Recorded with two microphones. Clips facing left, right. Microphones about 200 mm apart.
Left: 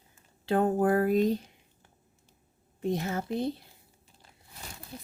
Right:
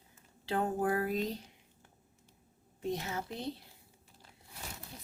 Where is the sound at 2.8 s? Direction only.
50° left (ahead or behind).